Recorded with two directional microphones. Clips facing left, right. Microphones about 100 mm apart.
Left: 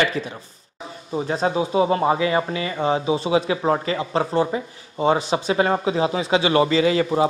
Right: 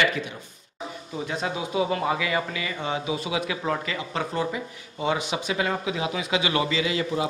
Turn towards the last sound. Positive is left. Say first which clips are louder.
# left 8 dB
turn(degrees=40)  # may be behind; listen again after turning